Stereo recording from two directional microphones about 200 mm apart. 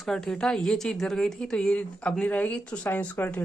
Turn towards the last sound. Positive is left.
turn(degrees=10)  # may be behind; listen again after turning